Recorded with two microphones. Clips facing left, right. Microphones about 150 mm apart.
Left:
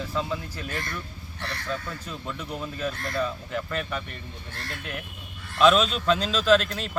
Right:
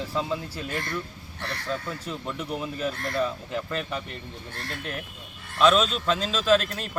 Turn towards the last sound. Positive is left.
turn(degrees=-5)  # may be behind; listen again after turning